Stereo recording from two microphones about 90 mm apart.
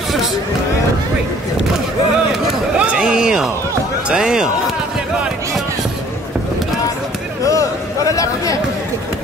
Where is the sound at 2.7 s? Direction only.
10° right (ahead or behind).